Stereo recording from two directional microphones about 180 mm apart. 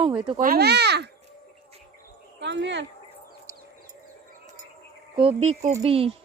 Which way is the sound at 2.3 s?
80° right.